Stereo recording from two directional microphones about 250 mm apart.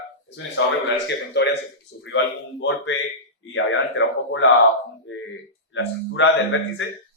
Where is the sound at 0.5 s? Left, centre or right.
Left.